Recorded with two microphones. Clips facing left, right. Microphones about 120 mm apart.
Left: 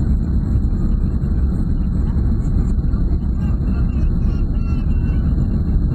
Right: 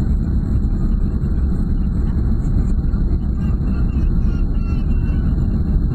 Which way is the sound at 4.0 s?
45° left (ahead or behind).